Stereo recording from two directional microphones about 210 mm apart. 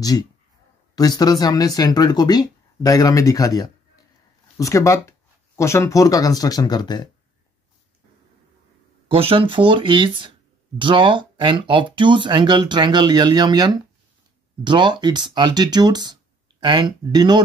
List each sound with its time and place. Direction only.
0.9 s speech: 20° left (ahead or behind)
9.1 s speech: 25° right (ahead or behind)